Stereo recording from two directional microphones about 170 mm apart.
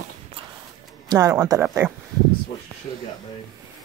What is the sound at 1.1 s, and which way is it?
Speech, 20° right (ahead or behind).